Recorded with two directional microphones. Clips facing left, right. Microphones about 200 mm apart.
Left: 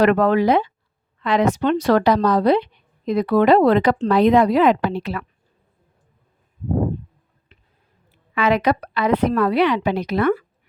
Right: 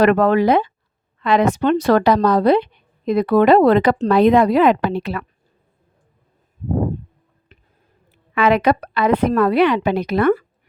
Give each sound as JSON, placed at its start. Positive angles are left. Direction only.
{"t": 0.0, "sound": "a woman's voice", "side_deg": -55}
{"t": 8.4, "sound": "a woman's voice", "side_deg": -55}